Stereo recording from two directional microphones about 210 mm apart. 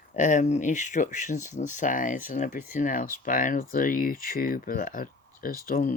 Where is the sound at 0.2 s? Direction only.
35° left (ahead or behind).